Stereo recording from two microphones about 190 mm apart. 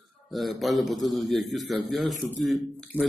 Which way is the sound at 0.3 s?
Centre (ahead or behind).